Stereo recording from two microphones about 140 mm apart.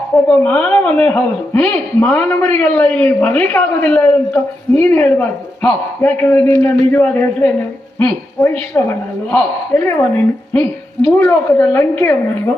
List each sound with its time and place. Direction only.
0.3 s a man's voice: 10° left (ahead or behind)